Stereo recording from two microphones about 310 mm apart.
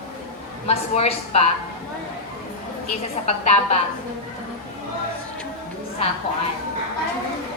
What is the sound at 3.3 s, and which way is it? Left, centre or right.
Speech, centre.